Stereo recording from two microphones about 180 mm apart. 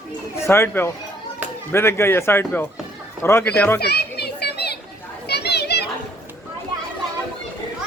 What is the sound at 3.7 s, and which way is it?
Children playing, 65° left (ahead or behind).